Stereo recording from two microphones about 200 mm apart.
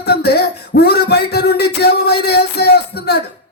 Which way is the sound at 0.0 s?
55° left (ahead or behind).